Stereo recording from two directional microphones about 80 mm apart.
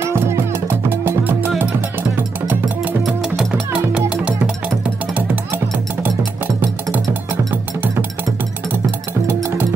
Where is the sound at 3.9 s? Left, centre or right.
Centre.